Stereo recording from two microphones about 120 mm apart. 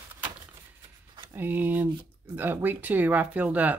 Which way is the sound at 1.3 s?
15° right (ahead or behind).